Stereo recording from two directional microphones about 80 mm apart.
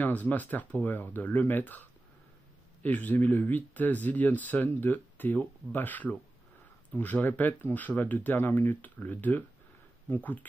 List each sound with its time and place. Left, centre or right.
0.0 s speech: left